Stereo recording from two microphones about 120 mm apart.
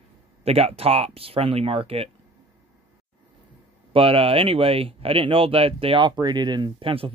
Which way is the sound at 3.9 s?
50° right (ahead or behind).